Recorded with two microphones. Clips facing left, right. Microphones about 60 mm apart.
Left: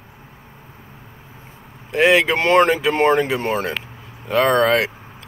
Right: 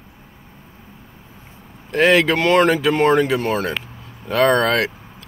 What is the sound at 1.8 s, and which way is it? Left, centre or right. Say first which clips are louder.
Speech: even; centre.